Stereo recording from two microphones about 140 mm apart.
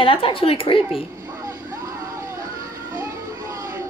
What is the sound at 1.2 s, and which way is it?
Vehicle, 20° right (ahead or behind).